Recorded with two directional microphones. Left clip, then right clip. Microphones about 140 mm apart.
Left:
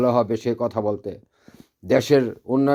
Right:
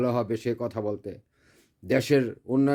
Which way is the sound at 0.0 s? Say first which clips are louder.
Left 7 dB; 25° right (ahead or behind).